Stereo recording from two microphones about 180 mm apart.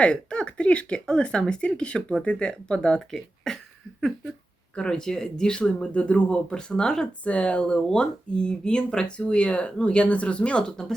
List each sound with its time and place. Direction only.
0.0 s speech: 5° left (ahead or behind)
4.7 s speech: 5° left (ahead or behind)